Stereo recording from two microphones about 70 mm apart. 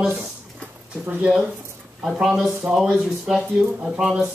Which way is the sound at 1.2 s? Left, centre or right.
Centre.